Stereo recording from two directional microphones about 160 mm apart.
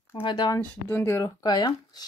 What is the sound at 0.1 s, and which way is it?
Speech, 30° left (ahead or behind).